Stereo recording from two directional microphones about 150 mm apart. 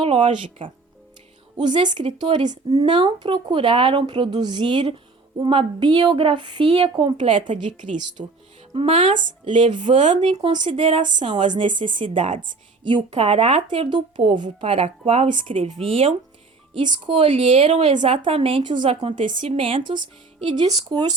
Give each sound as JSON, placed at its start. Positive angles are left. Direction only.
{"t": 0.0, "sound": "speech", "side_deg": -35}
{"t": 6.7, "sound": "speech", "side_deg": -40}
{"t": 7.0, "sound": "speech", "side_deg": -30}
{"t": 7.5, "sound": "a woman's voice", "side_deg": -55}
{"t": 8.2, "sound": "speech", "side_deg": -40}
{"t": 10.0, "sound": "speech", "side_deg": -50}
{"t": 10.5, "sound": "speech", "side_deg": -35}
{"t": 14.7, "sound": "speech", "side_deg": -50}
{"t": 17.8, "sound": "speech", "side_deg": -50}
{"t": 18.2, "sound": "speech", "side_deg": -35}